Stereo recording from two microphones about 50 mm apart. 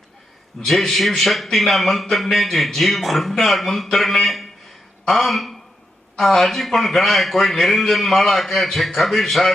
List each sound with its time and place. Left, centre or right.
0.6 s a man's voice: centre